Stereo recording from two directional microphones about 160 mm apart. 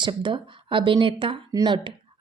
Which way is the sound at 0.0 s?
30° right (ahead or behind).